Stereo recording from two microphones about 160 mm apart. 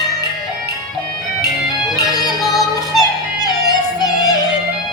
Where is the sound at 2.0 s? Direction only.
25° left (ahead or behind).